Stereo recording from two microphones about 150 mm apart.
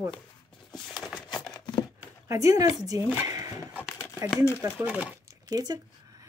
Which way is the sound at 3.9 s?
15° left (ahead or behind).